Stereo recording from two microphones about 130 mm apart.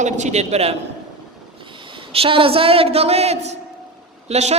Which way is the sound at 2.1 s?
45° right (ahead or behind).